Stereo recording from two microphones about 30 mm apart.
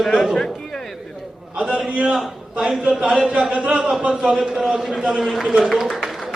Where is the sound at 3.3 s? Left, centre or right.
Right.